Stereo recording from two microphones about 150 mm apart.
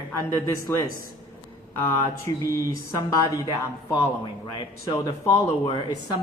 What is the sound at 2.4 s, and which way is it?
Speech, 20° left (ahead or behind).